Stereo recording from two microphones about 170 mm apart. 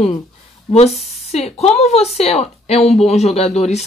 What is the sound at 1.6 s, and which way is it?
Speech, 40° left (ahead or behind).